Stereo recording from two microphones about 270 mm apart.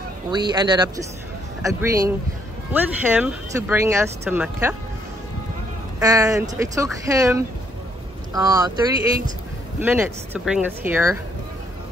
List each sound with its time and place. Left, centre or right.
0.3 s speech: centre
5.9 s speech: centre
9.8 s speech: centre